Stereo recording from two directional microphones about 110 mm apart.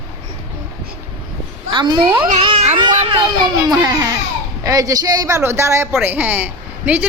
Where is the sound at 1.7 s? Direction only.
45° right (ahead or behind).